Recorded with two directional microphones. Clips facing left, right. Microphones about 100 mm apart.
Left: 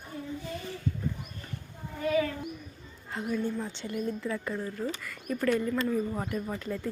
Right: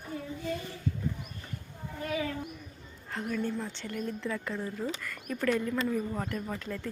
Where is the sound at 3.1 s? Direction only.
10° left (ahead or behind).